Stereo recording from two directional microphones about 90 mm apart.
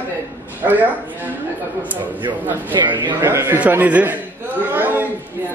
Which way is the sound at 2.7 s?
60° right (ahead or behind).